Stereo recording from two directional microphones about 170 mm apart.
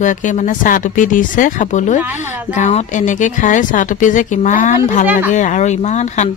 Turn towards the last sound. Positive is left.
turn(degrees=45)  # may be behind; listen again after turning